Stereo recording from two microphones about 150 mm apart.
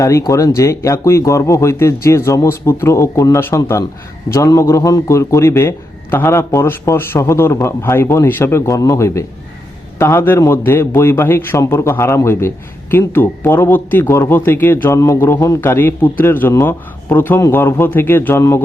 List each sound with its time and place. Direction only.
0.0 s a man's voice: 20° left (ahead or behind)